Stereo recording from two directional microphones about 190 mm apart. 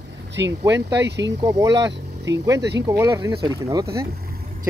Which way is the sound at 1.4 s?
20° right (ahead or behind).